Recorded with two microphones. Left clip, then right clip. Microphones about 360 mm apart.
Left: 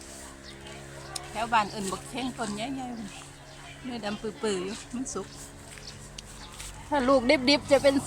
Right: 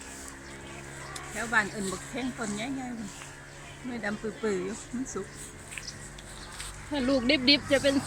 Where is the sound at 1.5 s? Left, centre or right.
Centre.